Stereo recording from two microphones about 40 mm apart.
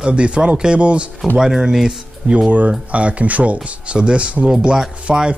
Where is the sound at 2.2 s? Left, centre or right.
Right.